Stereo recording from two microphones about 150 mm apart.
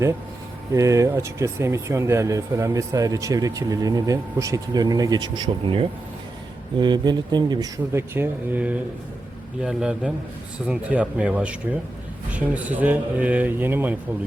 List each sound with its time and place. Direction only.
0.7 s speech: 20° right (ahead or behind)
7.9 s a man's voice: 15° right (ahead or behind)